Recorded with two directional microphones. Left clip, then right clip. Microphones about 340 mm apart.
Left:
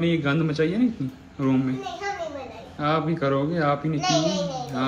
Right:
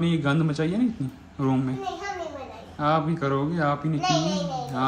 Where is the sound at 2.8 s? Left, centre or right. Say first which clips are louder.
Even; centre.